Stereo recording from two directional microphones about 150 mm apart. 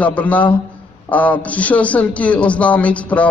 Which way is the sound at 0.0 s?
10° left (ahead or behind).